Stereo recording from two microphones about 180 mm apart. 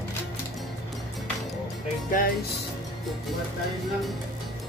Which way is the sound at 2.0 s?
50° left (ahead or behind).